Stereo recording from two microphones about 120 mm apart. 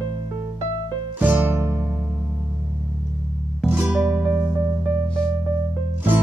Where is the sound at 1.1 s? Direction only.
15° right (ahead or behind).